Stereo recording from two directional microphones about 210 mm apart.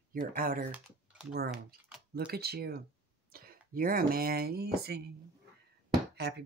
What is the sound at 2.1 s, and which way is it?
Speech, 50° right (ahead or behind).